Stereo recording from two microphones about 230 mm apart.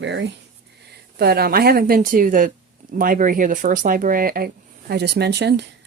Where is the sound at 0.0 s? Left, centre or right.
Right.